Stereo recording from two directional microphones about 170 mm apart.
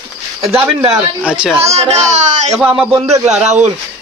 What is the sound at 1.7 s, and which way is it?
Speech, 40° right (ahead or behind).